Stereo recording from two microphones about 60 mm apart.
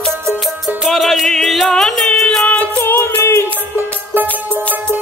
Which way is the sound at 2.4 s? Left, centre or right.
Left.